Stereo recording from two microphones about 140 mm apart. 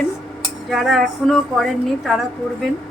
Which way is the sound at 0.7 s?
Centre (ahead or behind).